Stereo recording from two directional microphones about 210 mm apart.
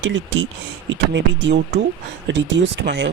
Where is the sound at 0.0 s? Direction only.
60° right (ahead or behind).